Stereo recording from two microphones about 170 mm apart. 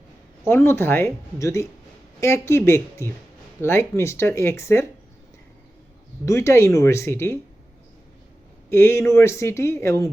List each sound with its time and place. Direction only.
0.4 s speech: 15° left (ahead or behind)
6.2 s speech: 15° left (ahead or behind)
8.7 s speech: 15° left (ahead or behind)